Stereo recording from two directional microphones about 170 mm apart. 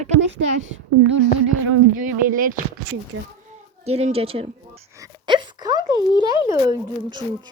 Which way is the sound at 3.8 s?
40° right (ahead or behind).